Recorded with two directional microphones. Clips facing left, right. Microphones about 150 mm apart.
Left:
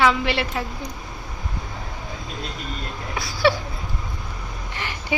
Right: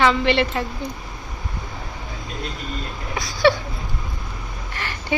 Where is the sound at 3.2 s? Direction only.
5° left (ahead or behind).